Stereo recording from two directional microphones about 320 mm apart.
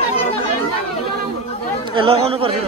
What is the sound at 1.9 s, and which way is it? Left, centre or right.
Speech, centre.